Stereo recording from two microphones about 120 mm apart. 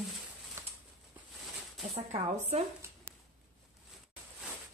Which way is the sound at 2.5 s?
70° right (ahead or behind).